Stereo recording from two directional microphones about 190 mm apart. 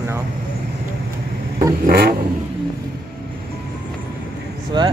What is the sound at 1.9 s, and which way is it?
Vehicle, 55° right (ahead or behind).